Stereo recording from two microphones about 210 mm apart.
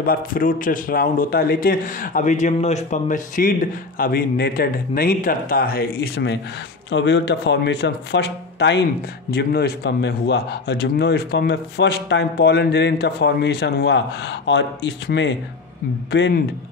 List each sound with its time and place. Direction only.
0.0 s a man's voice: 45° left (ahead or behind)